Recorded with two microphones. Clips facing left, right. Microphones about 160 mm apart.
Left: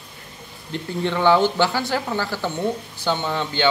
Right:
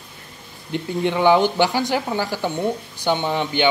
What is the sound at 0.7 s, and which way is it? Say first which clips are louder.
Speech: right 3 dB; 15° right (ahead or behind).